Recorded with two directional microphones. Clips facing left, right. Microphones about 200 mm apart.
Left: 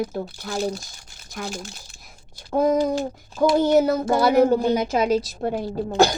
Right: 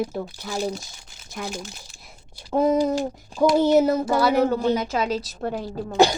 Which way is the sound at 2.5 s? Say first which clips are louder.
Even; 5° right (ahead or behind).